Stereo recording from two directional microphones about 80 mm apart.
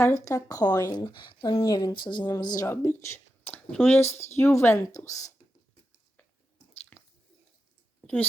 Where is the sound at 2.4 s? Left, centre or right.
Left.